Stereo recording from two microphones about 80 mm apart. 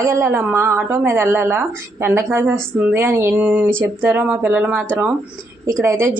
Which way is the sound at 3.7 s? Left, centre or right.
Right.